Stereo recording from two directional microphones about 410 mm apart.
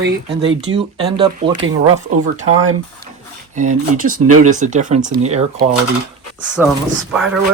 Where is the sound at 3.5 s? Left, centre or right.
Centre.